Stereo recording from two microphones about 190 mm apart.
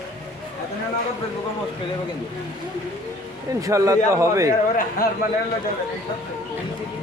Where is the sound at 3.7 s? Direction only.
15° right (ahead or behind).